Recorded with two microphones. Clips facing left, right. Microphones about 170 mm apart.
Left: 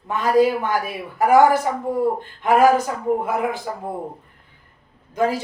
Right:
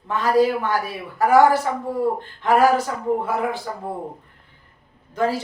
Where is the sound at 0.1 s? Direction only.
15° left (ahead or behind).